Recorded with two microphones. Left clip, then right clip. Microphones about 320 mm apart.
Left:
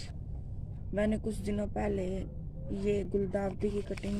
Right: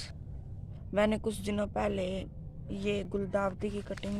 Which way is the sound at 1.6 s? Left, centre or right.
Right.